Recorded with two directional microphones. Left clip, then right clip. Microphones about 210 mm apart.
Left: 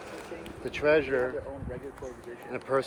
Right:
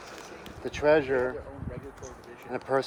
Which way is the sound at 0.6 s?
45° right (ahead or behind).